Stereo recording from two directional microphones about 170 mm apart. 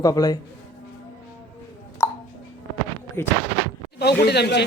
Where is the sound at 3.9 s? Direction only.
75° left (ahead or behind).